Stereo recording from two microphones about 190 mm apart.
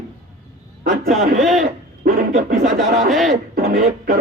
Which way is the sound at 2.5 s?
55° right (ahead or behind).